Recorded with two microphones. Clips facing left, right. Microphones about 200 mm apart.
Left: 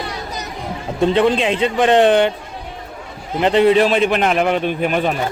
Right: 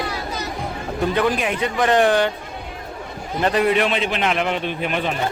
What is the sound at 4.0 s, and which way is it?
A man's voice, 50° left (ahead or behind).